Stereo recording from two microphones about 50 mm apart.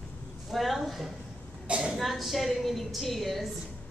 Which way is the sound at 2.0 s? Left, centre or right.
Centre.